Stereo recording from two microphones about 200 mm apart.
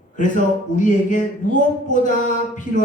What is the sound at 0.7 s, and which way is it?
Speech, 40° left (ahead or behind).